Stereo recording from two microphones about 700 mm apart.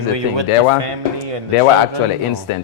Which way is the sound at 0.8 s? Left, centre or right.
Right.